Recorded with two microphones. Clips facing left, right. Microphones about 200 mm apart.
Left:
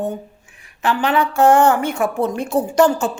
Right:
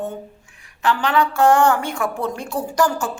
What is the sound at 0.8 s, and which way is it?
A woman's voice, 20° left (ahead or behind).